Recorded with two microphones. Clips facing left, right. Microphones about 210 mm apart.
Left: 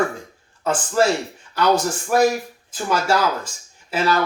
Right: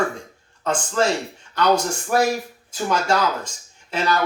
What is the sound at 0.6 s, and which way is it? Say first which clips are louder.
A man's voice: left 2 dB; 5° left (ahead or behind).